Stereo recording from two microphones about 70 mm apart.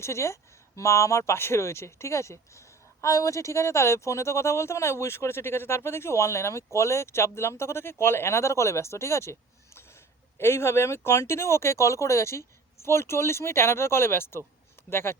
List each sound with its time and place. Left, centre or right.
0.0 s speech: left